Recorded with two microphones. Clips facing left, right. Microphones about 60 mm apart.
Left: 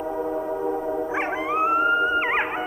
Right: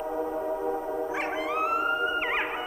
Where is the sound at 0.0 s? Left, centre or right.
Centre.